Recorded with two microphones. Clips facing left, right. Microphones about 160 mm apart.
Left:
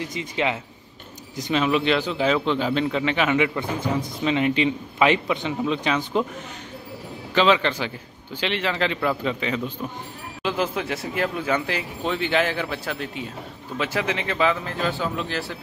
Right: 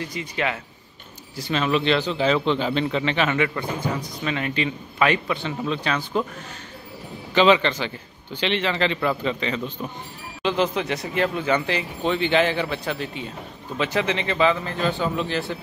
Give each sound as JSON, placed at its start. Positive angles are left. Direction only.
{"t": 0.0, "sound": "a man's voice", "side_deg": 20}
{"t": 7.3, "sound": "speech", "side_deg": 0}